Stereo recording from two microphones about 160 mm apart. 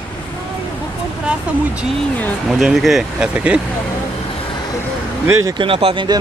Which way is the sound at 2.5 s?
Centre (ahead or behind).